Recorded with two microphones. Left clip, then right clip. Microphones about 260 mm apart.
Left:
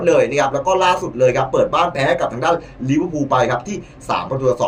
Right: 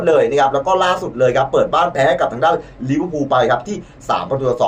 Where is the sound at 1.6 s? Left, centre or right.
Right.